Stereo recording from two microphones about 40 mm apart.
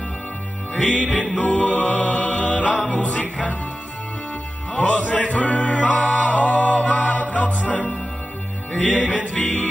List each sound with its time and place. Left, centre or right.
0.7 s music: left
4.7 s music: left